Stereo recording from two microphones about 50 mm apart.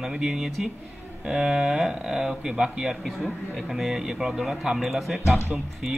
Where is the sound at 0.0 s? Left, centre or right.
Centre.